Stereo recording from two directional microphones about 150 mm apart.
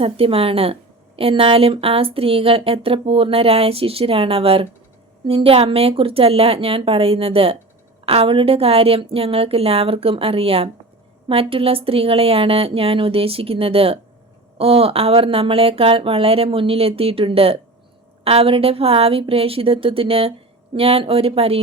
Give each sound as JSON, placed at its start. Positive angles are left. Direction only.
{"t": 0.0, "sound": "a woman's voice", "side_deg": -40}